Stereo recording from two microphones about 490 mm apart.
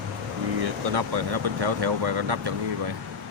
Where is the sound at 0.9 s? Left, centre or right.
Right.